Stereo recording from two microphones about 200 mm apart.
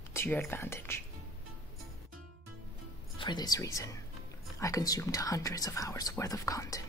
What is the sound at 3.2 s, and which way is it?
A woman's voice, 20° left (ahead or behind).